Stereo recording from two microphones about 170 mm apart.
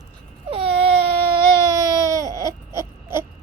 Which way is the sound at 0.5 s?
35° right (ahead or behind).